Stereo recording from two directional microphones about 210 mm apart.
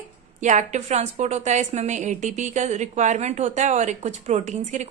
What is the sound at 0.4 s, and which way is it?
A woman's voice, 35° right (ahead or behind).